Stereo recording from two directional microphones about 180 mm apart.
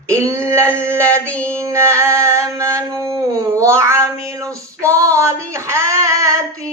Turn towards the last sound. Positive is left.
turn(degrees=-15)  # may be behind; listen again after turning